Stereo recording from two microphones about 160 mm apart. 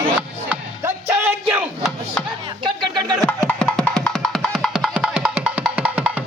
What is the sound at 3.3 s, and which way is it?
Music, 5° left (ahead or behind).